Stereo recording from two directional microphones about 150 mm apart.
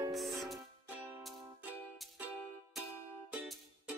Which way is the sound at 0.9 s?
15° right (ahead or behind).